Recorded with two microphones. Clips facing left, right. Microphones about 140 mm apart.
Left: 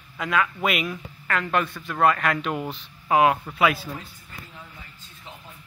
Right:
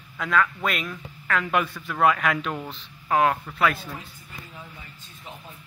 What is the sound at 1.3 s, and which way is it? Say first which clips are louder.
A man's voice: even; 5° right (ahead or behind).